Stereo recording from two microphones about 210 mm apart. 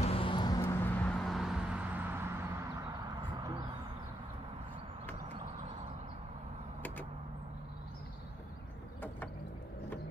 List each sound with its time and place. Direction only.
0.0 s vehicle: 25° left (ahead or behind)
0.6 s vehicle: 10° left (ahead or behind); by 2.3 s 10° right (ahead or behind)